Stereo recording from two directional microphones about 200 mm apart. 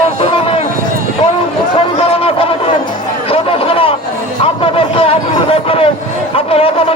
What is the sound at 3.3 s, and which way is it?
Music, 25° left (ahead or behind).